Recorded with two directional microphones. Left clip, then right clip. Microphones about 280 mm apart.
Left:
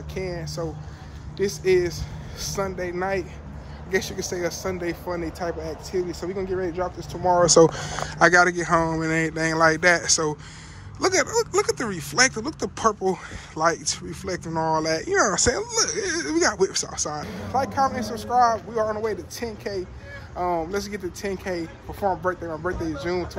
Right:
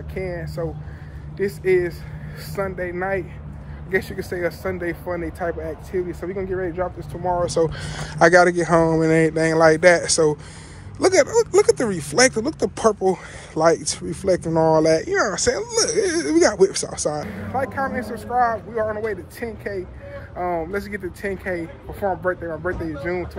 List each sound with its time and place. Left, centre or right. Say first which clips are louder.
0.1 s speech: right 2 dB; centre
7.2 s speech: left 4 dB; left